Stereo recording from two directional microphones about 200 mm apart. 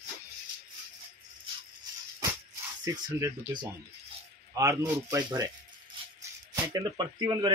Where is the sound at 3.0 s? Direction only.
20° right (ahead or behind).